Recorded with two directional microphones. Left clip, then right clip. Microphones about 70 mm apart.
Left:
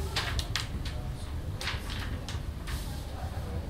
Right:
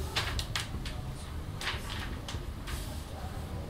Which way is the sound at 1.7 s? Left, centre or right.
Centre.